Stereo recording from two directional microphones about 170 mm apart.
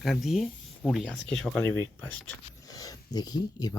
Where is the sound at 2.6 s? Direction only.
20° left (ahead or behind).